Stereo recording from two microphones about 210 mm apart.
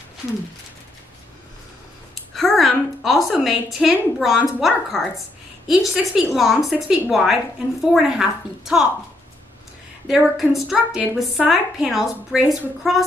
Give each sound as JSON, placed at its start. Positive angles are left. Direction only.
{"t": 2.3, "sound": "a sound", "side_deg": 0}
{"t": 3.7, "sound": "a woman's voice", "side_deg": 0}
{"t": 10.0, "sound": "a woman's voice", "side_deg": 0}